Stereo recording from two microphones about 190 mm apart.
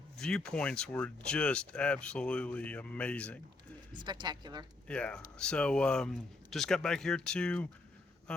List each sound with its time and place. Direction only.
0.2 s speech: 5° left (ahead or behind)
3.9 s speech: 25° right (ahead or behind)
4.9 s speech: 5° left (ahead or behind)